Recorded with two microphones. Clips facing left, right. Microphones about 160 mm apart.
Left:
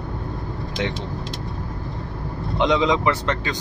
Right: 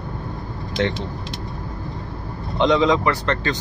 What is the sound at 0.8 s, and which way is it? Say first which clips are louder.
Speech: right 4 dB; 10° left (ahead or behind).